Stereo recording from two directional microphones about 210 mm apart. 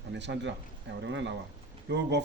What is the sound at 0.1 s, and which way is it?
Speech, 55° right (ahead or behind).